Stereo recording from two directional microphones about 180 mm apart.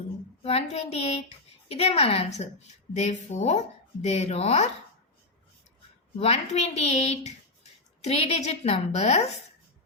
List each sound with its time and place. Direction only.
0.4 s a woman's voice: 35° left (ahead or behind)
6.1 s speech: 35° left (ahead or behind)